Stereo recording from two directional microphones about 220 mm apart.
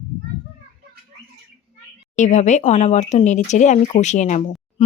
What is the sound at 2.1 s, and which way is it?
Speech, 35° left (ahead or behind).